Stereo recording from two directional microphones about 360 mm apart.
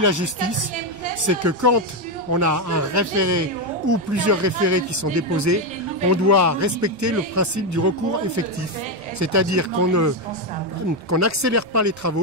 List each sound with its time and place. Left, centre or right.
0.0 s a woman's voice: right